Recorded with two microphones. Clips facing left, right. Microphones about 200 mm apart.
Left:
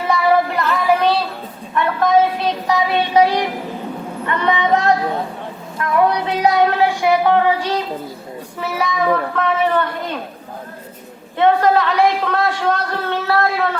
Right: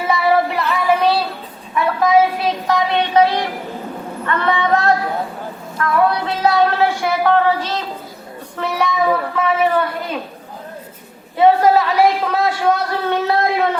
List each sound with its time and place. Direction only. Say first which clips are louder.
0.1 s female singing: even; 5° right (ahead or behind)
1.7 s a sound: right 1 dB; 5° right (ahead or behind); by 3.4 s 10° left (ahead or behind)
4.3 s a woman's voice: even; 15° left (ahead or behind); by 10.2 s 5° right (ahead or behind)
11.3 s a woman's voice: right 2 dB; 5° right (ahead or behind)